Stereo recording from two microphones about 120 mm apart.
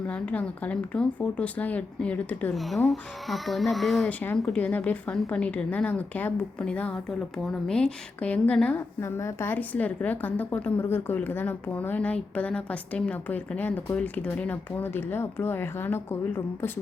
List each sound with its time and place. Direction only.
0.1 s a woman's voice: 10° left (ahead or behind)
2.6 s a child's voice: centre (ahead or behind)
4.4 s a woman's voice: 10° left (ahead or behind)
9.0 s a woman's voice: 20° left (ahead or behind)